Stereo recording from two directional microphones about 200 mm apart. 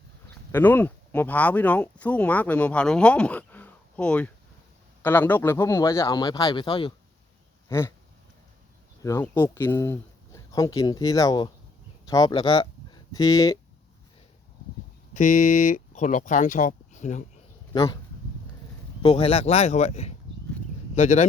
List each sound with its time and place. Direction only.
0.5 s speech: 10° left (ahead or behind); by 6.9 s 25° left (ahead or behind)
7.7 s speech: 15° left (ahead or behind)
9.0 s speech: 15° left (ahead or behind)
15.1 s speech: 40° left (ahead or behind)
17.7 s speech: 20° left (ahead or behind)
19.0 s a man's voice: 30° left (ahead or behind)